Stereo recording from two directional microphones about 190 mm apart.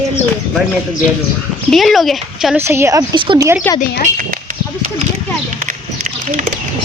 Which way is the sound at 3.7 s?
45° left (ahead or behind).